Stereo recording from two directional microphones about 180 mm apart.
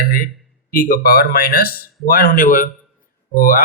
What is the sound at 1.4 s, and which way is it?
Speech, 55° left (ahead or behind).